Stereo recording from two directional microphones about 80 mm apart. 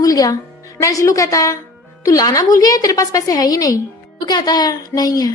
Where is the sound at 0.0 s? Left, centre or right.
Left.